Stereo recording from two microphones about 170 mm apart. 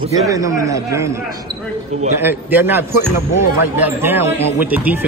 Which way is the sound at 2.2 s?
10° right (ahead or behind).